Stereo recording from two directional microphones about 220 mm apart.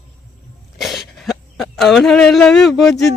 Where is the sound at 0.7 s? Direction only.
Centre (ahead or behind).